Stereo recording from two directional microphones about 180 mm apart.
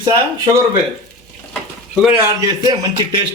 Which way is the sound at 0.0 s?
15° right (ahead or behind).